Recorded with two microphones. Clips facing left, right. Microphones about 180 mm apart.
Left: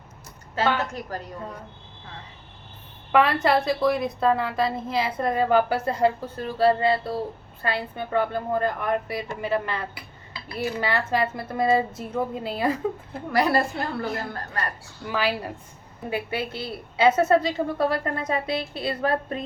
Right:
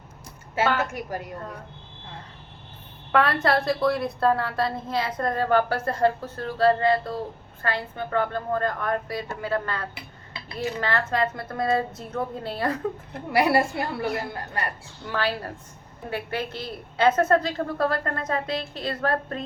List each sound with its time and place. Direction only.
0.6 s a woman's voice: 5° right (ahead or behind)
3.1 s a woman's voice: 5° left (ahead or behind)
10.8 s a woman's voice: 10° left (ahead or behind)
13.3 s a woman's voice: 15° right (ahead or behind)
15.0 s a woman's voice: 10° left (ahead or behind)